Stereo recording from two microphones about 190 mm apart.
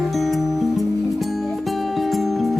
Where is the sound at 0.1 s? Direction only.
Centre (ahead or behind).